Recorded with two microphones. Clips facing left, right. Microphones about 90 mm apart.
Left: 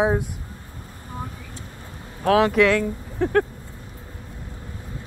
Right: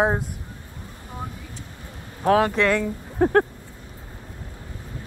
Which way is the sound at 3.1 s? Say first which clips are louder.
Right 2 dB; 40° right (ahead or behind).